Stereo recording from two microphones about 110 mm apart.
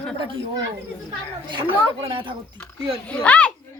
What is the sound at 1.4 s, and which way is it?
Speech, 45° right (ahead or behind).